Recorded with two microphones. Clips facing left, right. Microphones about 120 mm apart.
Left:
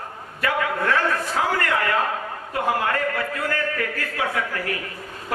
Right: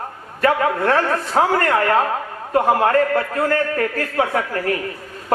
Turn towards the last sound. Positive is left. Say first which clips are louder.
# right 6 dB
turn(degrees=-40)  # may be behind; listen again after turning